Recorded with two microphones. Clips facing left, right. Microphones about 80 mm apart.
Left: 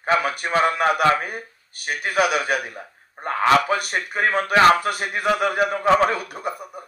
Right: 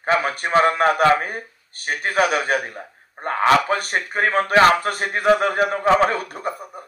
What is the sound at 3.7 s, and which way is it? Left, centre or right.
A man's voice, right.